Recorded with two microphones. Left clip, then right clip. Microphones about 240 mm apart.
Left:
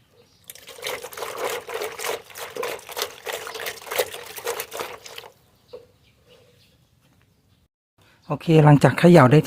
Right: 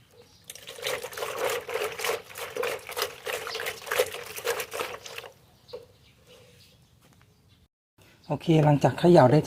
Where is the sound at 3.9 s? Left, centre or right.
Left.